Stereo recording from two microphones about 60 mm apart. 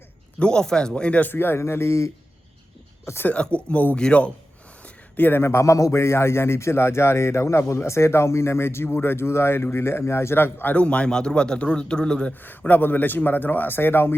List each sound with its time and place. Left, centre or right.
0.3 s a man's voice: centre
1.3 s a man's voice: left
3.2 s a man's voice: centre
5.1 s a man's voice: left
5.4 s a man's voice: left
10.8 s a man's voice: centre
12.3 s speech: left